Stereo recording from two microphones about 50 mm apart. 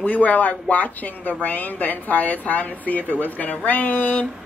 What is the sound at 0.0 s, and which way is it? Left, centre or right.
A woman's voice, left.